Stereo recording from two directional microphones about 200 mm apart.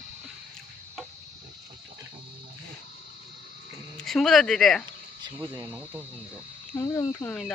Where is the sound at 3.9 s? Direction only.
Centre (ahead or behind).